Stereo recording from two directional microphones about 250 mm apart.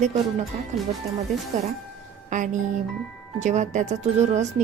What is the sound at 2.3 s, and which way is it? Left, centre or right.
Speech, right.